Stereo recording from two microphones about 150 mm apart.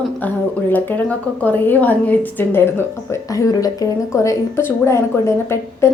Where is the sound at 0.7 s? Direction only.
10° left (ahead or behind).